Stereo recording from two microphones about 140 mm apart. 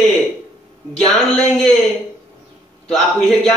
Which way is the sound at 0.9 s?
Centre (ahead or behind).